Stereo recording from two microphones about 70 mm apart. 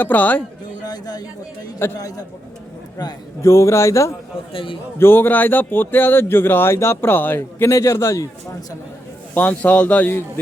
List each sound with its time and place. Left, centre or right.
0.0 s a man's voice: left
0.9 s speech: left
2.0 s a man's voice: left
3.0 s a man's voice: left
3.4 s speech: left
4.9 s speech: left
7.7 s speech: left
9.3 s a man's voice: left